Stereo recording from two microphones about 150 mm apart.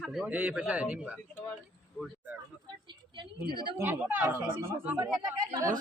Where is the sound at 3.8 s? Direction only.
15° right (ahead or behind).